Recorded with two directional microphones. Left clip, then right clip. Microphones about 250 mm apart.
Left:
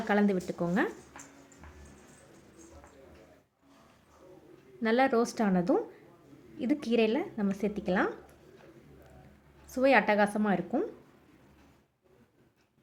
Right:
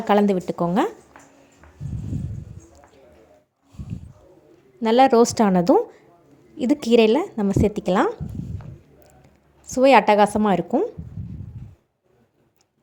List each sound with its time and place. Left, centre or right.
0.1 s a woman's voice: right
4.8 s a woman's voice: right
9.6 s a woman's voice: right